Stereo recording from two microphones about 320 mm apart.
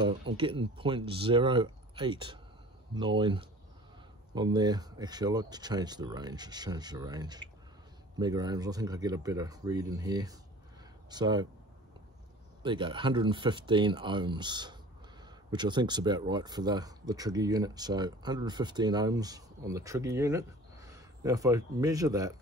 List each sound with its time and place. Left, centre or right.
0.0 s speech: centre
12.6 s speech: centre